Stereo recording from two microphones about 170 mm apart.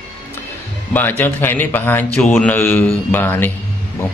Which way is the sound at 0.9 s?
10° left (ahead or behind).